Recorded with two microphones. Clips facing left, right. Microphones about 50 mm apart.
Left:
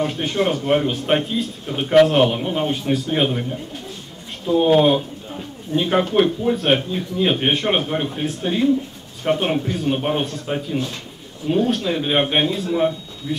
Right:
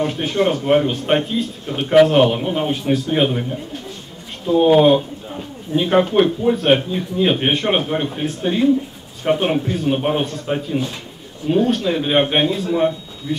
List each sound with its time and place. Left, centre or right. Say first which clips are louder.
0.0 s speech: right 2 dB; centre